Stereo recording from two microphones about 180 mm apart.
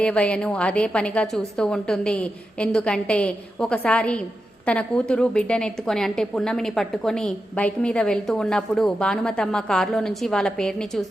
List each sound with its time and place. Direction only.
0.0 s a woman's voice: 5° left (ahead or behind)